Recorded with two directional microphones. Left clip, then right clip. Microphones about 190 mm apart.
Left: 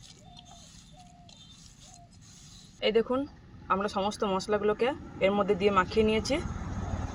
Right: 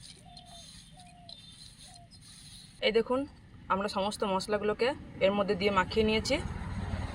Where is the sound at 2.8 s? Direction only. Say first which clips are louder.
Left 1 dB; 15° left (ahead or behind).